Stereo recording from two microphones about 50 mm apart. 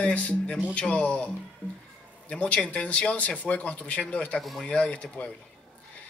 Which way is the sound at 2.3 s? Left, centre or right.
Left.